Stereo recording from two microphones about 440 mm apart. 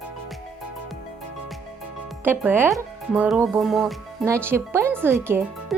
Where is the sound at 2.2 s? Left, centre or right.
Centre.